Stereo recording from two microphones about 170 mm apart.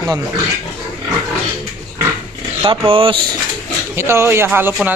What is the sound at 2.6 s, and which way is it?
Speech, 30° right (ahead or behind).